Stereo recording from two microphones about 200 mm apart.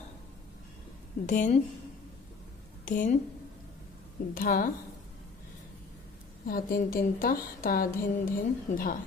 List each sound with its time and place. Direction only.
1.2 s a woman's voice: 40° left (ahead or behind)
2.8 s a woman's voice: 40° left (ahead or behind)
4.3 s a woman's voice: 45° left (ahead or behind)
6.4 s a woman's voice: 45° left (ahead or behind)